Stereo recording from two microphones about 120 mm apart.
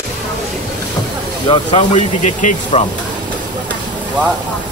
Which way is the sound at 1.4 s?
40° left (ahead or behind).